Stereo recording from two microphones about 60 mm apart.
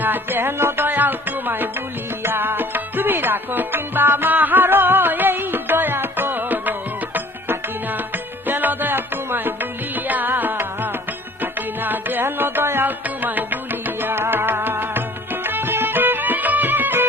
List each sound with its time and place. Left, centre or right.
0.0 s music: right
11.8 s music: right